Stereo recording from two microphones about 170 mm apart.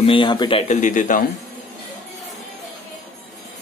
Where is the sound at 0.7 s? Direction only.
45° left (ahead or behind).